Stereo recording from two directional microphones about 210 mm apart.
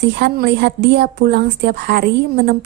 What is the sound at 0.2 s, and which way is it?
A woman's voice, 50° right (ahead or behind).